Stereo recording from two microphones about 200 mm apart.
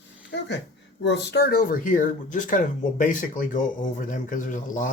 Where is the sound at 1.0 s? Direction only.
55° left (ahead or behind).